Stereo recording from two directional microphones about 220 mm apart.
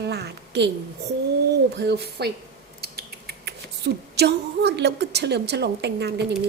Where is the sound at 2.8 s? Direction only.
45° right (ahead or behind).